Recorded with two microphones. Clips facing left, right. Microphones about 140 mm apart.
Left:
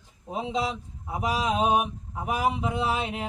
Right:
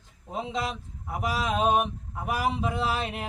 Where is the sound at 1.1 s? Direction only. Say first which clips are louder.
Left 2 dB; 20° left (ahead or behind).